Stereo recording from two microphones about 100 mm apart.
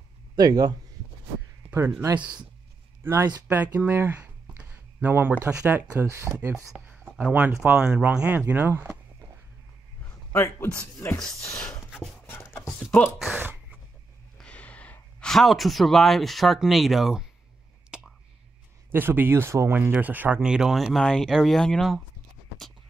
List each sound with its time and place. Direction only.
0.4 s speech: 40° right (ahead or behind)
1.7 s speech: 25° right (ahead or behind)
3.4 s a sound: 20° right (ahead or behind)
5.8 s speech: 30° right (ahead or behind)
6.9 s a sound: 15° right (ahead or behind)
7.7 s speech: 10° right (ahead or behind)
10.3 s speech: 25° left (ahead or behind)
11.5 s a sound: 10° left (ahead or behind)
13.3 s a sound: 20° right (ahead or behind)
14.4 s speech: 15° left (ahead or behind); by 17.2 s 5° right (ahead or behind)
17.9 s whispering: 10° right (ahead or behind)
18.9 s speech: 20° right (ahead or behind)
19.9 s speech: 15° right (ahead or behind)
20.5 s speech: 5° right (ahead or behind)